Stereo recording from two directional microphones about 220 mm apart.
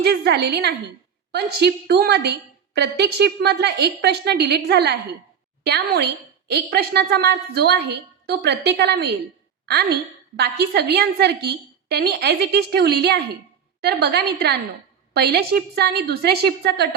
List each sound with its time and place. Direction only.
0.0 s a woman's voice: 45° right (ahead or behind)